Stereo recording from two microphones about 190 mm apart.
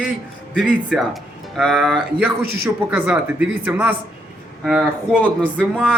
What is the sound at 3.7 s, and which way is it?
Speech, 10° right (ahead or behind).